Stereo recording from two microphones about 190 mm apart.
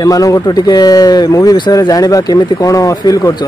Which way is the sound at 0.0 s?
20° left (ahead or behind).